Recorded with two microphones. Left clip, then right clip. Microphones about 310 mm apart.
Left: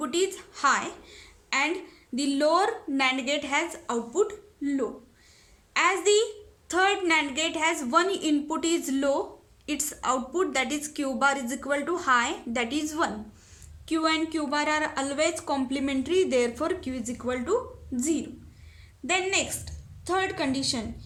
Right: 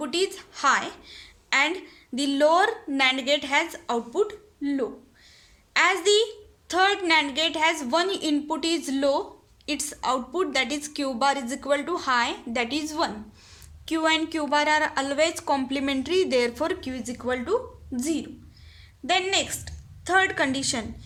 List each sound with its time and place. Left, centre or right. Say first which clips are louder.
0.0 s a woman's voice: right 1 dB; centre